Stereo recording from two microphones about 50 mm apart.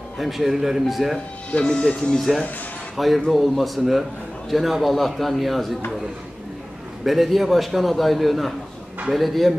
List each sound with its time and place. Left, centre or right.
0.2 s a man's voice: centre
1.5 s speech: centre
2.1 s a man's voice: centre
7.1 s a man's voice: centre